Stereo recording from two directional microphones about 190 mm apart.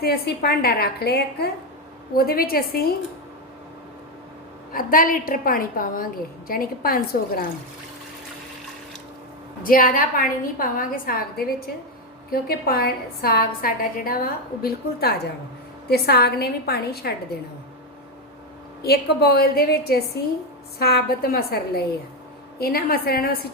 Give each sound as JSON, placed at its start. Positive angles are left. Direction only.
{"t": 0.0, "sound": "a woman's voice", "side_deg": 55}
{"t": 4.7, "sound": "a woman's voice", "side_deg": 45}
{"t": 9.6, "sound": "a woman's voice", "side_deg": 50}
{"t": 18.8, "sound": "a woman's voice", "side_deg": 55}